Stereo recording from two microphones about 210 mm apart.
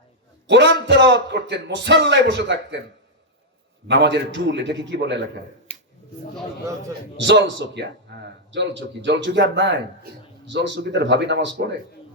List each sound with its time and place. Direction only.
0.4 s speech: 55° right (ahead or behind)
3.8 s speech: 55° right (ahead or behind)
5.7 s a sound: 30° left (ahead or behind)
7.2 s speech: 60° right (ahead or behind)